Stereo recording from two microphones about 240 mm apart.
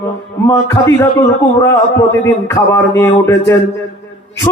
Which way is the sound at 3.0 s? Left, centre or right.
Centre.